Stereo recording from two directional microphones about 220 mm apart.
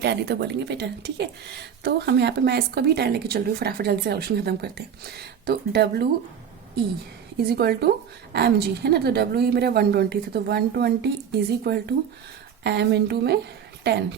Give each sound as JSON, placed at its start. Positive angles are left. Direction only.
{"t": 0.0, "sound": "speech", "side_deg": -50}
{"t": 7.3, "sound": "speech", "side_deg": -45}